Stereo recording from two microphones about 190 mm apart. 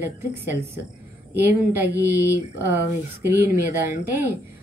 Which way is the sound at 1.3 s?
10° right (ahead or behind).